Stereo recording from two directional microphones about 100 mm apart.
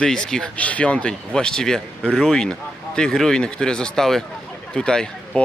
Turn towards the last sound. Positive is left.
turn(degrees=10)  # may be behind; listen again after turning